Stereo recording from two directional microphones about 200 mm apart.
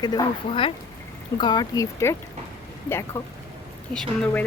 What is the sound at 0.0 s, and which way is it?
Speech, 20° left (ahead or behind).